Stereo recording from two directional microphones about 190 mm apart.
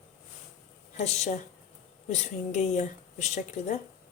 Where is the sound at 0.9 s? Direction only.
35° left (ahead or behind).